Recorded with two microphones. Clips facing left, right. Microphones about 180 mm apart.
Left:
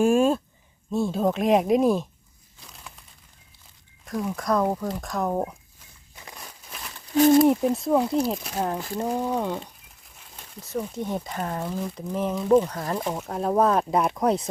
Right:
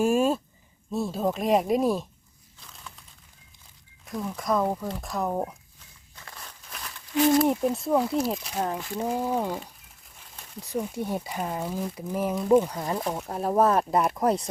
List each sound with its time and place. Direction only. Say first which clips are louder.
0.0 s a sound: left 3 dB; 5° right (ahead or behind)
0.9 s speech: left 3 dB; centre (ahead or behind)
4.0 s speech: left 3 dB; centre (ahead or behind)
6.1 s walk: left 2 dB; 15° left (ahead or behind)
7.4 s speech: left 4 dB; centre (ahead or behind)
10.6 s speech: even; 10° right (ahead or behind)